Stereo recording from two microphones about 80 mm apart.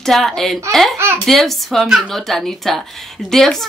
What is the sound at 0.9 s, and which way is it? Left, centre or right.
Speech, right.